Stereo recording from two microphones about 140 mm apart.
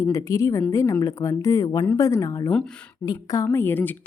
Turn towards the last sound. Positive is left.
turn(degrees=15)  # may be behind; listen again after turning